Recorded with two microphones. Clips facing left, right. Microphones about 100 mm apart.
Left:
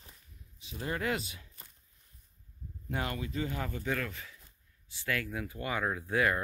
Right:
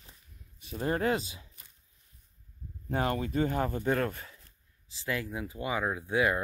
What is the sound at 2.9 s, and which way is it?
Speech, 35° right (ahead or behind).